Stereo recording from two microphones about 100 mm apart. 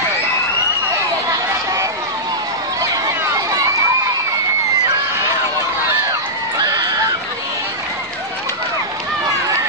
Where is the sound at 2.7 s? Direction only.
35° right (ahead or behind).